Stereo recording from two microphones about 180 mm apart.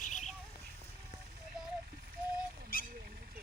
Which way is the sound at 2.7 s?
50° left (ahead or behind).